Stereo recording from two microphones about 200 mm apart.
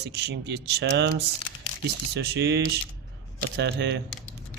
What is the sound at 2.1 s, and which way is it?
Speech, 55° right (ahead or behind).